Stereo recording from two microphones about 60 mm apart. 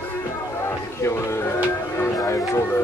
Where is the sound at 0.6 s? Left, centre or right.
Left.